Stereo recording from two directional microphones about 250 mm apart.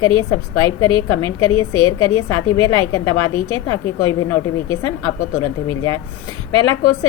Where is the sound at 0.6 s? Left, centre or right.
Centre.